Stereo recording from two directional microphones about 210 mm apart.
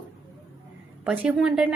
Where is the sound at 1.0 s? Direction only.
5° right (ahead or behind).